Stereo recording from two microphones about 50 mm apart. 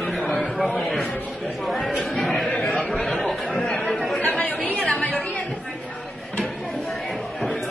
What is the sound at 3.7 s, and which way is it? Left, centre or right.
Speech, centre.